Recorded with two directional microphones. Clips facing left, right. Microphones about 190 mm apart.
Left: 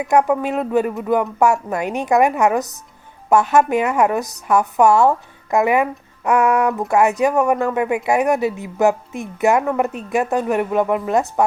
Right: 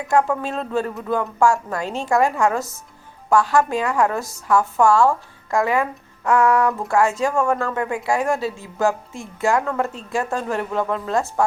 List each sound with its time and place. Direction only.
0.0 s a woman's voice: 20° left (ahead or behind)